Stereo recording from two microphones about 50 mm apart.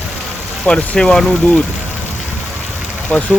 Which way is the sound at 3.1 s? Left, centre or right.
Left.